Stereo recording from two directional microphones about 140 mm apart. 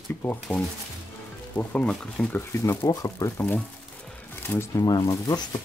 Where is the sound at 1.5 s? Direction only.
5° left (ahead or behind).